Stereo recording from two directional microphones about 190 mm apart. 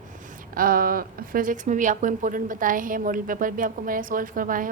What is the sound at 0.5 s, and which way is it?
A woman's voice, 50° right (ahead or behind).